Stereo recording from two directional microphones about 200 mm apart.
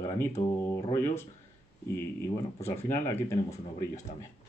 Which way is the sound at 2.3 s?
10° left (ahead or behind).